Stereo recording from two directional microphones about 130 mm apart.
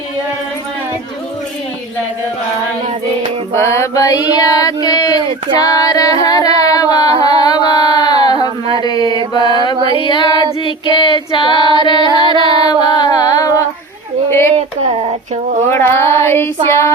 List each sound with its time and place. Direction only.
3.5 s child singing: 20° left (ahead or behind)
5.5 s music: 30° left (ahead or behind)
6.7 s singing: 30° left (ahead or behind)
7.2 s music: 30° left (ahead or behind)
8.8 s mantra: 30° left (ahead or behind)
9.7 s a sound: 40° right (ahead or behind)
10.0 s female singing: 40° left (ahead or behind)
12.5 s child singing: 35° left (ahead or behind)
14.3 s a sound: 20° left (ahead or behind)
14.5 s a sound: 55° right (ahead or behind)
15.7 s child singing: 20° left (ahead or behind)